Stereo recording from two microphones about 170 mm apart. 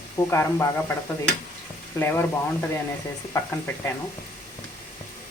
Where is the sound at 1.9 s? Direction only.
15° left (ahead or behind).